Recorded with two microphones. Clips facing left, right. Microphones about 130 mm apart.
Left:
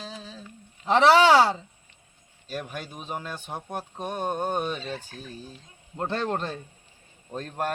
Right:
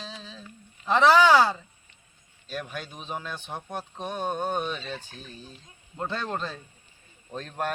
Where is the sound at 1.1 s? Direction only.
70° left (ahead or behind).